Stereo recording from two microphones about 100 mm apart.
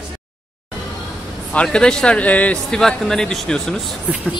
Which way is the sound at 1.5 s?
10° left (ahead or behind).